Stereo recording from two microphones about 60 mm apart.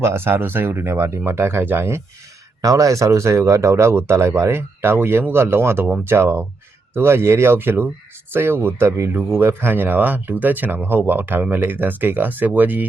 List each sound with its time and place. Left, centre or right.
0.0 s speech: right
2.6 s speech: right